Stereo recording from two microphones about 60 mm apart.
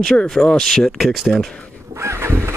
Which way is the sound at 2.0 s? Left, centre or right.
Right.